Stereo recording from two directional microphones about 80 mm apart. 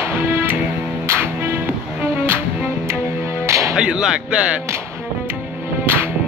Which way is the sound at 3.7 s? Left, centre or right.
Centre.